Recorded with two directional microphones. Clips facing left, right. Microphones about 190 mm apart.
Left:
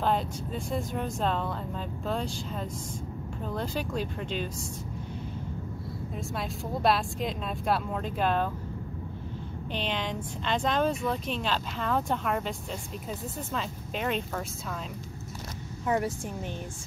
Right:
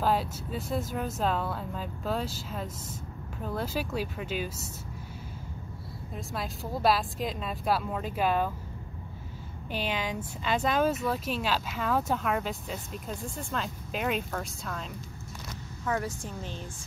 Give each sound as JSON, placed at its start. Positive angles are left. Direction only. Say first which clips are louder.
{"t": 0.0, "sound": "speech", "louder": "even", "side_deg": -5}
{"t": 6.1, "sound": "speech", "louder": "even", "side_deg": 0}
{"t": 9.7, "sound": "speech", "louder": "even", "side_deg": -5}
{"t": 15.8, "sound": "a woman's voice", "louder": "left 3 dB", "side_deg": 20}